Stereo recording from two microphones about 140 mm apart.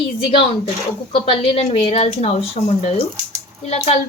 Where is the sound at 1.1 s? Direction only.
45° left (ahead or behind).